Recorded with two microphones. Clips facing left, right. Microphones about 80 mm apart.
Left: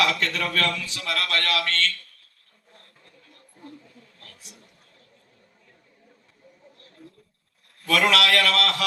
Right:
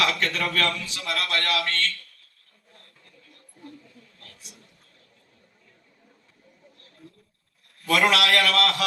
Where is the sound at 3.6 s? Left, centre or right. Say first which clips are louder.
Left 1 dB; left.